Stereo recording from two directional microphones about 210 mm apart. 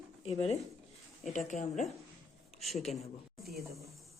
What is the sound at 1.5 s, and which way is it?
Speech, 35° left (ahead or behind).